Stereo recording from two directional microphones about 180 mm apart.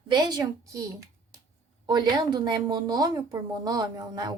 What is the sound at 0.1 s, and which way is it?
A woman's voice, 25° right (ahead or behind).